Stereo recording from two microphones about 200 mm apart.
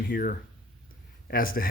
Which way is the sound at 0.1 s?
45° left (ahead or behind).